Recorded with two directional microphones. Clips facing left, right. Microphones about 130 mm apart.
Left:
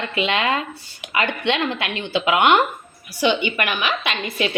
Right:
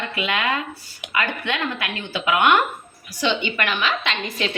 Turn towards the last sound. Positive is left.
turn(degrees=10)  # may be behind; listen again after turning